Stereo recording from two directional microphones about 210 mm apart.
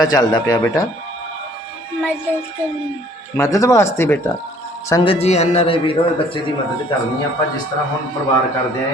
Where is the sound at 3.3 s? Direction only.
15° left (ahead or behind).